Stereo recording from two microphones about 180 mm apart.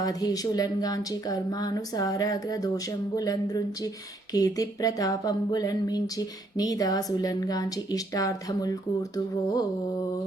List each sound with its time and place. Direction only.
0.0 s speech: 20° left (ahead or behind)